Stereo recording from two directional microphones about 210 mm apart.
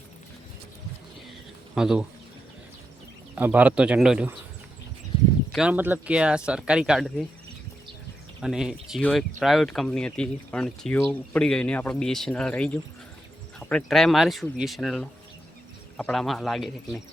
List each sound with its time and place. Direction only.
1.7 s speech: 5° right (ahead or behind)
3.3 s speech: 5° right (ahead or behind)
5.5 s speech: 5° right (ahead or behind)
8.4 s speech: centre (ahead or behind)